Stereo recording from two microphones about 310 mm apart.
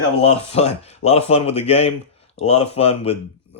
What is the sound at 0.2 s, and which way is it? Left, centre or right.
Speech, centre.